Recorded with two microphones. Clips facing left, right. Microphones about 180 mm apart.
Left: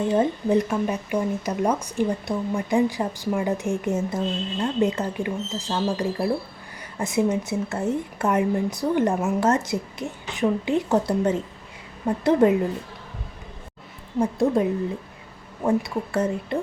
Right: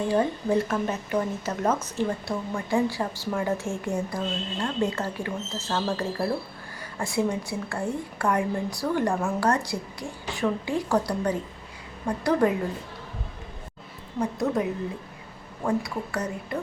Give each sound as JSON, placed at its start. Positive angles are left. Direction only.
{"t": 0.1, "sound": "a woman's voice", "side_deg": 20}
{"t": 14.2, "sound": "a woman's voice", "side_deg": 30}
{"t": 15.6, "sound": "a woman's voice", "side_deg": 25}